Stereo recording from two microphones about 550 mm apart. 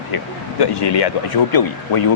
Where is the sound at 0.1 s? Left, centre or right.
Left.